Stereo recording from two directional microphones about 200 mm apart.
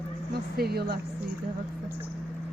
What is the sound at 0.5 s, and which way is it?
Speech, 50° right (ahead or behind).